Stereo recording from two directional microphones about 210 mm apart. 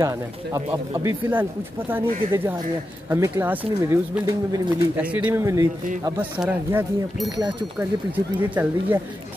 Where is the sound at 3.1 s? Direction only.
10° right (ahead or behind).